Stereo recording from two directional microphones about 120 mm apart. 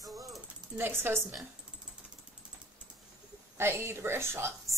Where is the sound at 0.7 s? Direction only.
20° right (ahead or behind).